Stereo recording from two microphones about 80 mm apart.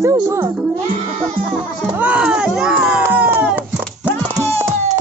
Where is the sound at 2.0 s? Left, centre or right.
Centre.